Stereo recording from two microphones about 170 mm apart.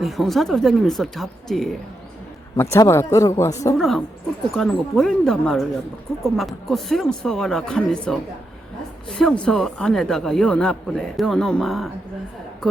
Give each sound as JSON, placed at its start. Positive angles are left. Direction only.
{"t": 0.0, "sound": "speech", "side_deg": 0}
{"t": 2.7, "sound": "speech", "side_deg": 15}
{"t": 3.8, "sound": "speech", "side_deg": 0}